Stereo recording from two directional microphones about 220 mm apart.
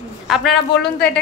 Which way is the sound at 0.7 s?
50° left (ahead or behind).